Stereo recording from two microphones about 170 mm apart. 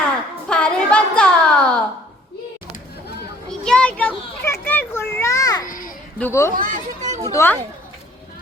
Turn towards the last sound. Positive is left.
turn(degrees=15)  # may be behind; listen again after turning